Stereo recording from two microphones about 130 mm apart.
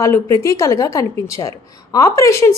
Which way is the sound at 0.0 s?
25° left (ahead or behind).